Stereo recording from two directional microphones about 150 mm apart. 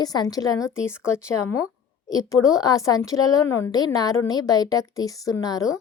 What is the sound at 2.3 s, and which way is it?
A woman's voice, 25° left (ahead or behind).